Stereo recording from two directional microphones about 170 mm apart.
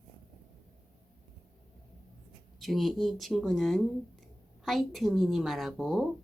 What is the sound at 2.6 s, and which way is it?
A woman's voice, centre (ahead or behind).